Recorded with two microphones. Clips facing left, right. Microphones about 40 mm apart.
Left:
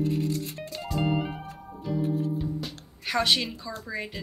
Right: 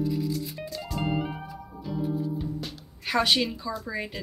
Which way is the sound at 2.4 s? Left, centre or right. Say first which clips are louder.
Left 1 dB; centre.